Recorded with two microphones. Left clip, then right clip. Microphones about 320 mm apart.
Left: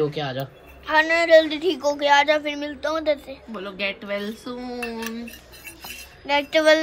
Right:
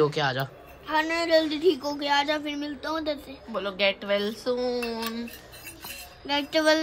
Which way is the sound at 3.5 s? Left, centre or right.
Right.